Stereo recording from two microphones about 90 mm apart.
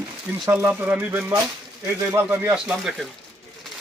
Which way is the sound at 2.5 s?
5° right (ahead or behind).